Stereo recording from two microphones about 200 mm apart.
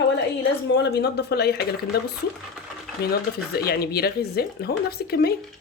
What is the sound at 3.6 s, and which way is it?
Speech, 50° left (ahead or behind).